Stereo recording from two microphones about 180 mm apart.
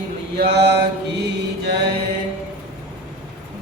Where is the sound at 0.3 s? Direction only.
65° right (ahead or behind).